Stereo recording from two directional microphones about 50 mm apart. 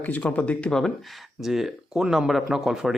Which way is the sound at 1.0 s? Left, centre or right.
Centre.